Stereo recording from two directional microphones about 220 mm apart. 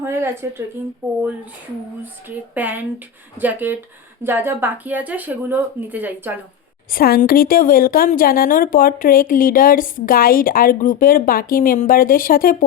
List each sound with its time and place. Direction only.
0.0 s speech: 10° right (ahead or behind)
2.3 s speech: 10° right (ahead or behind)
6.9 s a woman's voice: 40° left (ahead or behind)